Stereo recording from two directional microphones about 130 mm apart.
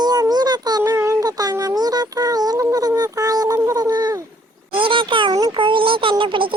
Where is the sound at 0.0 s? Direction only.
30° right (ahead or behind).